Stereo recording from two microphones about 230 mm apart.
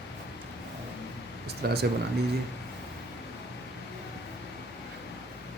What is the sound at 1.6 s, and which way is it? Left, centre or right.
Speech, right.